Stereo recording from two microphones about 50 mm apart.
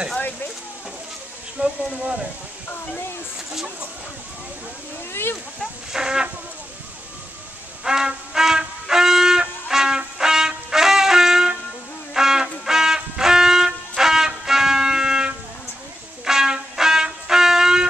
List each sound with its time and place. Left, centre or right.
1.6 s speech: right
5.1 s speech: left
5.9 s chicken: centre
7.8 s shofar: centre
12.1 s music: centre